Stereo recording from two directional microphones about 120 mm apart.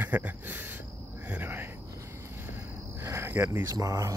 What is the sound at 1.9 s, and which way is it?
Cricket, 25° right (ahead or behind).